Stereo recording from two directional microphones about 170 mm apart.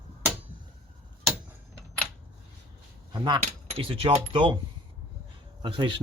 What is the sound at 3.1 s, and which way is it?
Keys jangling, 25° right (ahead or behind).